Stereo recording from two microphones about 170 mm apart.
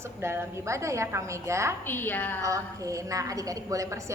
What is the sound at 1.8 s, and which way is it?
Speech, 10° left (ahead or behind).